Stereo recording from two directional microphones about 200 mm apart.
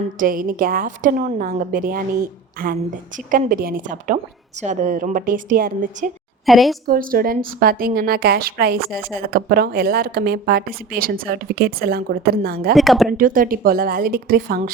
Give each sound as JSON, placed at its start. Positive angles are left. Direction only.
{"t": 0.2, "sound": "a woman's voice", "side_deg": -45}
{"t": 6.4, "sound": "a woman's voice", "side_deg": 0}
{"t": 6.8, "sound": "a woman's voice", "side_deg": -45}
{"t": 12.7, "sound": "a woman's voice", "side_deg": 0}
{"t": 13.1, "sound": "a woman's voice", "side_deg": -45}